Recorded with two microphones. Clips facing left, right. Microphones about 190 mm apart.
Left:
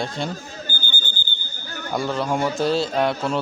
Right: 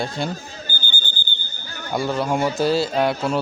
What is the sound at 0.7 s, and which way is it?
Alarm, 50° left (ahead or behind).